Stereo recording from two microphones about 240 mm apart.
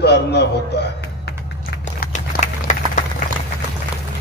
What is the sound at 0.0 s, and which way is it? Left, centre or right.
Speech, left.